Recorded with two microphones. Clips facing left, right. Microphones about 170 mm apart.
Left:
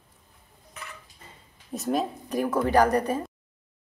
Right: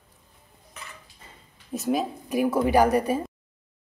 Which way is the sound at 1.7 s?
5° right (ahead or behind).